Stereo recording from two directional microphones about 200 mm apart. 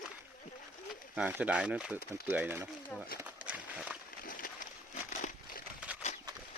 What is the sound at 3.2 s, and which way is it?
Run, 5° right (ahead or behind).